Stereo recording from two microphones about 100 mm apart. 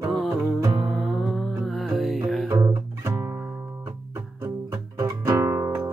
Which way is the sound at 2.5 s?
35° right (ahead or behind).